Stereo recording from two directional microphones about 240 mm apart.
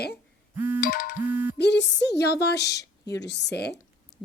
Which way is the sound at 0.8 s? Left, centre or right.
Left.